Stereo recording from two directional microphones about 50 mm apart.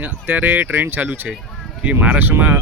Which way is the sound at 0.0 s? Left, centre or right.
Right.